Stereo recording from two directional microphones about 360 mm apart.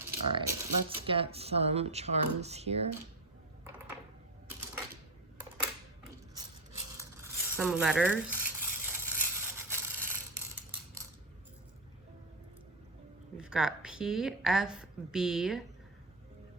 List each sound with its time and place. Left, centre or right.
0.0 s speech: centre
6.3 s a sound: centre
13.3 s speech: centre